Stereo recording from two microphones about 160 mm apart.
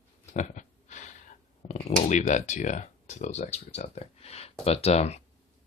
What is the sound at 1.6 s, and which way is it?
Speech, 50° left (ahead or behind).